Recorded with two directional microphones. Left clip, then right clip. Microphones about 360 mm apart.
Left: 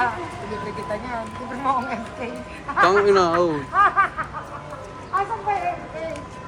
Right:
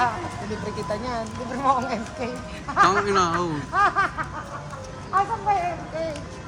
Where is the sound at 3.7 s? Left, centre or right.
Right.